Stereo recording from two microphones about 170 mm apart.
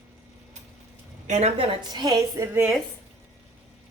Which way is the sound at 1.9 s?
20° right (ahead or behind).